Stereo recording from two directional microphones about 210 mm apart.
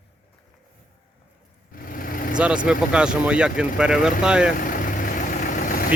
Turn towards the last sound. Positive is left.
turn(degrees=40)  # may be behind; listen again after turning